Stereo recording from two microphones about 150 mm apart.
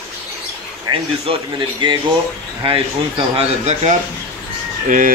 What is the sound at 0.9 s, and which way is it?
Speech, 30° right (ahead or behind).